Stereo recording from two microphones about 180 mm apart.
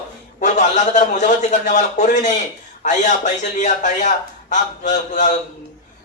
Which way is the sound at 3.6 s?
45° left (ahead or behind).